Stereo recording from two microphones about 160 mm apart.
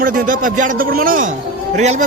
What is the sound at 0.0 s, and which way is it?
A man's voice, 60° right (ahead or behind).